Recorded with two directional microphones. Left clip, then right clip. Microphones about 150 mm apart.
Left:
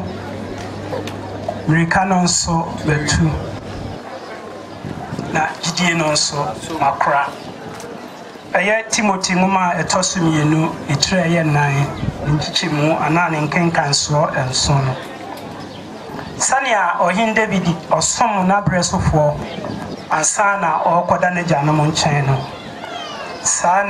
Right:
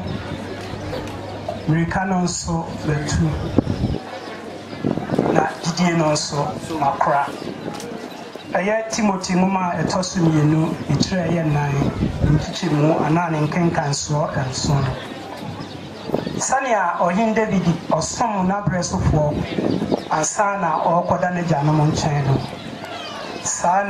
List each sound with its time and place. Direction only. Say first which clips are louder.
1.7 s speech: left 7 dB; 25° left (ahead or behind)
5.3 s a sound: left 6 dB; 25° left (ahead or behind)
6.8 s speech: left 3 dB; 30° left (ahead or behind)
8.5 s speech: left 4 dB; 25° left (ahead or behind)
16.3 s speech: left 4 dB; 25° left (ahead or behind)
23.4 s speech: left 3 dB; 25° left (ahead or behind)